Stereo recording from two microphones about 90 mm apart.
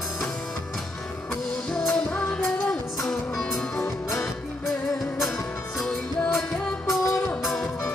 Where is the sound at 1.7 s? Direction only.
10° left (ahead or behind).